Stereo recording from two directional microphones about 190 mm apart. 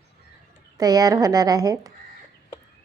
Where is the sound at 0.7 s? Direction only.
20° right (ahead or behind).